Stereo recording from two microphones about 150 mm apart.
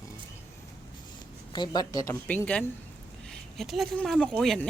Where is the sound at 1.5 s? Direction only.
30° left (ahead or behind).